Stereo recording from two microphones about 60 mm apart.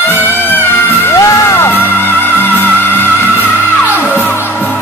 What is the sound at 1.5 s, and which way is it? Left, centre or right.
Music, left.